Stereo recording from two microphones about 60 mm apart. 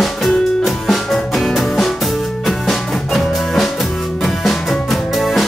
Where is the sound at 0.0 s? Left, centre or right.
Centre.